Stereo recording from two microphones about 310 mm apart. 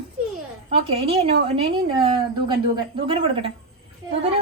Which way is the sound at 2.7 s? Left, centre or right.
Centre.